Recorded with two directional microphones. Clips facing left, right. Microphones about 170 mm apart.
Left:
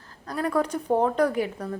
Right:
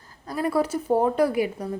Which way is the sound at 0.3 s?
10° right (ahead or behind).